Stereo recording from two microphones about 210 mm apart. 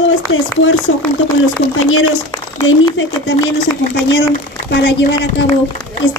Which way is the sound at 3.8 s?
50° left (ahead or behind).